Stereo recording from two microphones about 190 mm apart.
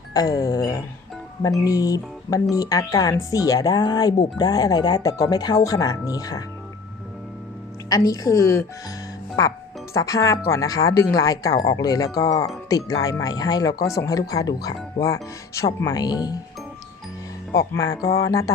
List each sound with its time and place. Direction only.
0.1 s speech: 20° left (ahead or behind)
7.9 s speech: 20° left (ahead or behind)
17.5 s speech: 20° left (ahead or behind)